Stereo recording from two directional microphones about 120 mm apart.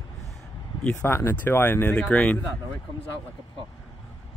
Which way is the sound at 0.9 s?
20° left (ahead or behind).